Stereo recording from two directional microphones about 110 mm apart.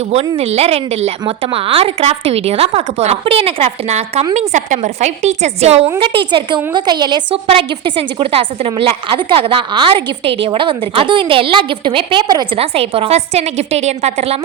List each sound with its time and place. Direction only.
0.1 s a woman's voice: 70° right (ahead or behind)
1.4 s a woman's voice: 60° right (ahead or behind); by 4.3 s 80° right
4.4 s a woman's voice: 90° right
6.0 s a woman's voice: 50° right (ahead or behind)
7.4 s a woman's voice: 55° right (ahead or behind)
12.5 s a woman's voice: 60° right (ahead or behind); by 14.3 s 80° right